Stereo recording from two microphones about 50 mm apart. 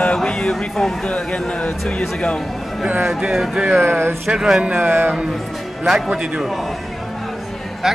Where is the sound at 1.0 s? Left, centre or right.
Left.